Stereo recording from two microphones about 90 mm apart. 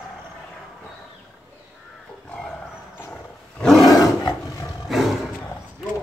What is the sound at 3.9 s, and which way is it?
Roar, 45° left (ahead or behind).